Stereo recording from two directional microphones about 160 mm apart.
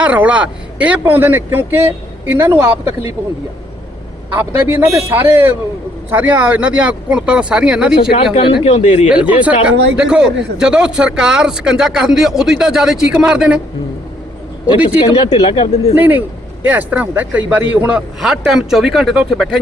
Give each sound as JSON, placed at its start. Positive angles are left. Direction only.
{"t": 0.0, "sound": "speech", "side_deg": -10}
{"t": 4.4, "sound": "speech", "side_deg": -15}
{"t": 8.1, "sound": "speech", "side_deg": 35}
{"t": 8.6, "sound": "speech", "side_deg": 45}
{"t": 9.0, "sound": "a man's voice", "side_deg": -10}
{"t": 14.8, "sound": "speech", "side_deg": 40}
{"t": 16.0, "sound": "a man's voice", "side_deg": -10}